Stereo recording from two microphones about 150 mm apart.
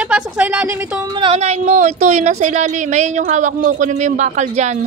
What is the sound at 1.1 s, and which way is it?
Speech, 35° right (ahead or behind).